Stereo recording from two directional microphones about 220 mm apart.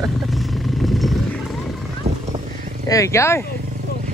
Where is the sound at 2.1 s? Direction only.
30° right (ahead or behind).